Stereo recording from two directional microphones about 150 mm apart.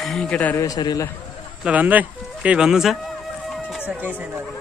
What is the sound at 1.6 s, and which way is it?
Speech, 10° right (ahead or behind).